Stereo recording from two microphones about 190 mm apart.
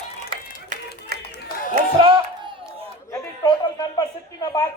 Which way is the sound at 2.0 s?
25° right (ahead or behind).